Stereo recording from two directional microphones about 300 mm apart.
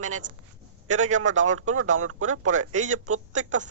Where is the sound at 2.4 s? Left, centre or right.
Right.